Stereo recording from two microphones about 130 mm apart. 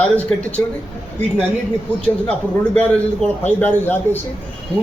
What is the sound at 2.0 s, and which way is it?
A man's voice, 10° left (ahead or behind).